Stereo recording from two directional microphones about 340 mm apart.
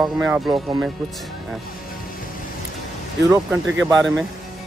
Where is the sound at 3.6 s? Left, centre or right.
Right.